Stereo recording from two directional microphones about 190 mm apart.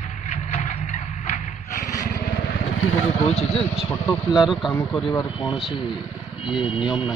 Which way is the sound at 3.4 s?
35° left (ahead or behind).